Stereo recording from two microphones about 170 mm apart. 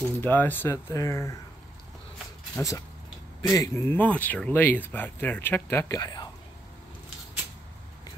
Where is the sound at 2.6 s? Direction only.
20° left (ahead or behind).